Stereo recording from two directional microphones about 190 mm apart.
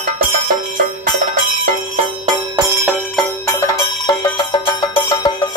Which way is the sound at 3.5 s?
20° left (ahead or behind).